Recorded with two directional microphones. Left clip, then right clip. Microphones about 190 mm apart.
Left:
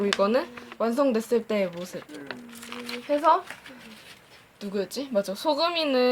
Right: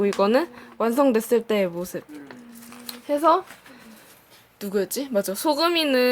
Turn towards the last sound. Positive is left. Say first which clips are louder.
# right 3 dB
turn(degrees=-45)  # may be behind; listen again after turning